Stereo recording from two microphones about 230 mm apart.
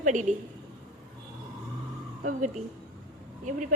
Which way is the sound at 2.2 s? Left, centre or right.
Right.